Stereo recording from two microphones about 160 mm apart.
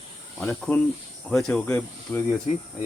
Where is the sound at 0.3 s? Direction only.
5° left (ahead or behind).